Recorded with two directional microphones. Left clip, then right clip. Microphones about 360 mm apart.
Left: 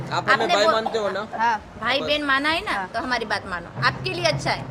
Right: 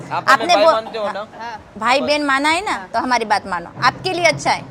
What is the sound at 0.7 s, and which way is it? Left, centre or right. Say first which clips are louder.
Speech: right 2 dB; centre.